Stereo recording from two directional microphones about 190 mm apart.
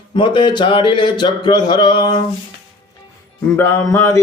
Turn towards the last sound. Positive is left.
turn(degrees=10)  # may be behind; listen again after turning